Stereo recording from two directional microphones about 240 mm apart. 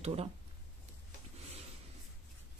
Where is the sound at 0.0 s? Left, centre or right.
Right.